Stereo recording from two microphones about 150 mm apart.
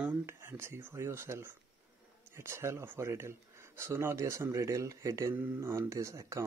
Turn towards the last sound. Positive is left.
turn(degrees=-20)  # may be behind; listen again after turning